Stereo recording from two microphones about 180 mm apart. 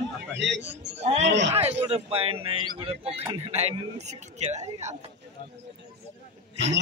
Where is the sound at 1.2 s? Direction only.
80° right.